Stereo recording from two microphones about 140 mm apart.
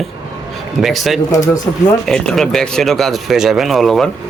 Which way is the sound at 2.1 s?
5° left (ahead or behind).